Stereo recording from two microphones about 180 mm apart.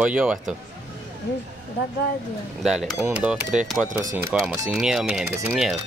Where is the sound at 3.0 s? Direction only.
10° right (ahead or behind).